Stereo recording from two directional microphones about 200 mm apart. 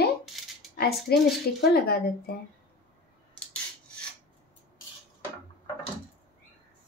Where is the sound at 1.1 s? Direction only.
55° left (ahead or behind).